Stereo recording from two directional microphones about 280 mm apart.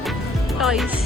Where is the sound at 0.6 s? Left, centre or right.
Centre.